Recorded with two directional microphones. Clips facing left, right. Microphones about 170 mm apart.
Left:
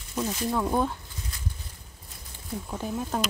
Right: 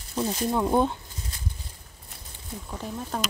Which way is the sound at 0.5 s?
20° right (ahead or behind).